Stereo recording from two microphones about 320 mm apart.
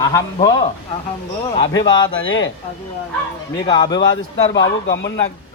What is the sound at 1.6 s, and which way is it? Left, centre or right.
Speech, left.